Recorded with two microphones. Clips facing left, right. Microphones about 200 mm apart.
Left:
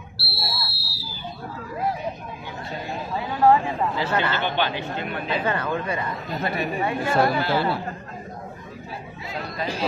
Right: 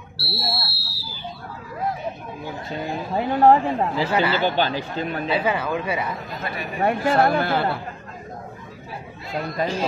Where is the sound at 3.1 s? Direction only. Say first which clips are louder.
Right 3 dB; 45° right (ahead or behind).